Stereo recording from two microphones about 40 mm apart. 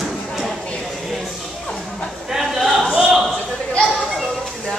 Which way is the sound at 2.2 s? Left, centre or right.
Centre.